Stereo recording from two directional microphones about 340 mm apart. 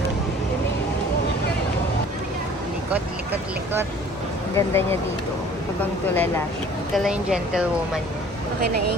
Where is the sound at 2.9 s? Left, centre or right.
Centre.